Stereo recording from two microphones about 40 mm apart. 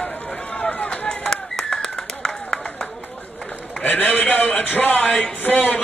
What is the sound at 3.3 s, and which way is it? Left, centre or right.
A man's voice, left.